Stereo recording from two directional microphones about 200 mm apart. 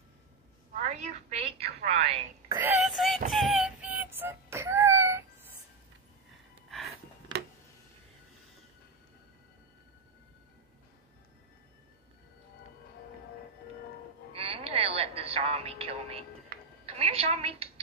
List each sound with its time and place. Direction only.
0.7 s a woman's voice: 35° right (ahead or behind)
2.5 s speech: 10° right (ahead or behind)
2.9 s synthetic singing: centre (ahead or behind)
3.3 s music: centre (ahead or behind)
14.3 s a sound: 30° right (ahead or behind)
16.5 s music: 45° right (ahead or behind)
16.9 s music: 30° right (ahead or behind)